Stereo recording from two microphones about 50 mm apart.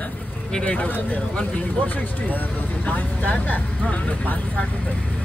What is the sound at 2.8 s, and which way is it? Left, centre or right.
Speech, left.